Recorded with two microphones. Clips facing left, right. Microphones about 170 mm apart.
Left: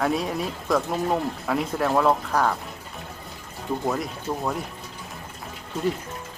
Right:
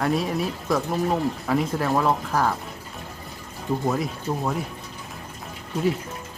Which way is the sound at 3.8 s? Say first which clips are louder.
Right 1 dB; centre (ahead or behind).